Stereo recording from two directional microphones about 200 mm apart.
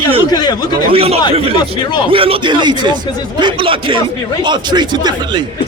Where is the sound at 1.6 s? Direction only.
25° left (ahead or behind).